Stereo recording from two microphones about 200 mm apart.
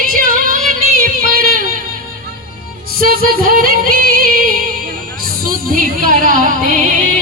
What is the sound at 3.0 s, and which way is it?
Music, 45° right (ahead or behind).